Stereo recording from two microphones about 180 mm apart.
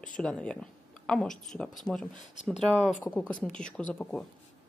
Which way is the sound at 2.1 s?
40° left (ahead or behind).